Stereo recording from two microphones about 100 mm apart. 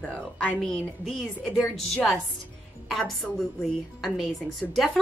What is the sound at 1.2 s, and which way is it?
Speech, 10° right (ahead or behind).